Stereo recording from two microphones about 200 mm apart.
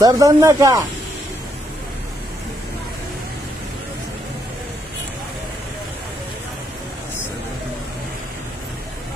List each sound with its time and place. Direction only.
0.0 s speech: 15° right (ahead or behind)